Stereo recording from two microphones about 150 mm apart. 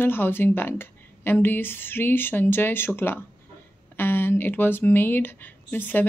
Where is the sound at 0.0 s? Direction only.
15° left (ahead or behind).